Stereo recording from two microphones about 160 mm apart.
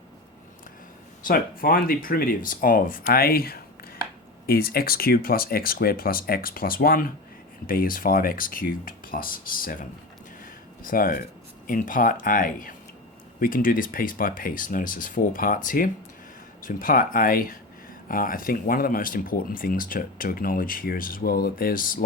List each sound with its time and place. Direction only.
1.2 s speech: 65° left (ahead or behind)
10.8 s speech: 60° left (ahead or behind)